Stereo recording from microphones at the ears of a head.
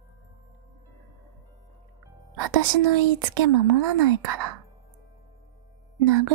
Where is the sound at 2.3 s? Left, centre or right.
Right.